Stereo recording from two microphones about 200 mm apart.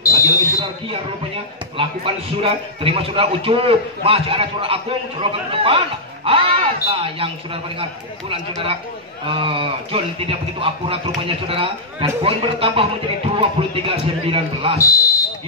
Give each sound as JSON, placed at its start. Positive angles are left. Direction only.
{"t": 0.0, "sound": "smoke detector", "side_deg": 15}
{"t": 0.6, "sound": "speech", "side_deg": -30}
{"t": 9.2, "sound": "speech", "side_deg": -25}
{"t": 14.8, "sound": "fire alarm", "side_deg": 15}